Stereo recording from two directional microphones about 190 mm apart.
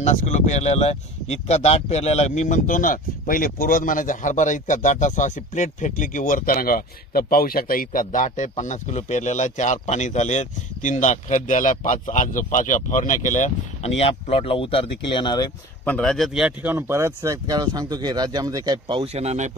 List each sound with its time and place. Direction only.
0.0 s speech: 40° left (ahead or behind); by 15.5 s 20° left (ahead or behind)
15.8 s speech: 5° left (ahead or behind); by 19.5 s 35° right (ahead or behind)